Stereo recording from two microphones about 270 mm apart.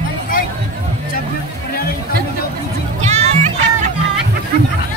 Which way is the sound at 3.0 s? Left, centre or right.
Right.